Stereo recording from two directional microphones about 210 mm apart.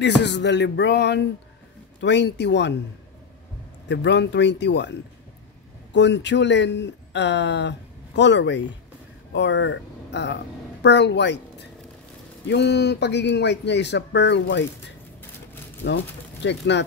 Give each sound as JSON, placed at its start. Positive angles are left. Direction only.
{"t": 0.0, "sound": "a man's voice", "side_deg": 55}
{"t": 3.9, "sound": "a man's voice", "side_deg": 55}
{"t": 5.9, "sound": "a woman's voice", "side_deg": 55}
{"t": 15.8, "sound": "a man's voice", "side_deg": 50}